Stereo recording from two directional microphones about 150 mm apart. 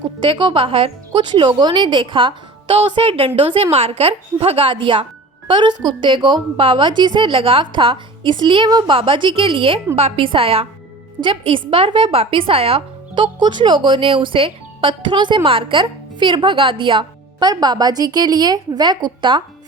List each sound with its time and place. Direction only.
0.2 s a woman's voice: 35° right (ahead or behind)